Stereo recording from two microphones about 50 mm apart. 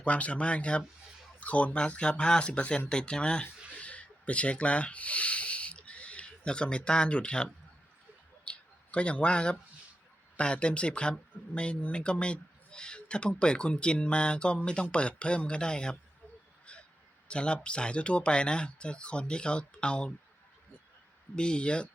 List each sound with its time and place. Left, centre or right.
0.0 s speech: left
3.8 s a sound: left
10.3 s speech: left
17.2 s speech: left
21.3 s speech: centre